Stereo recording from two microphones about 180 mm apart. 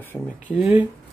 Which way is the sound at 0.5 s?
Centre (ahead or behind).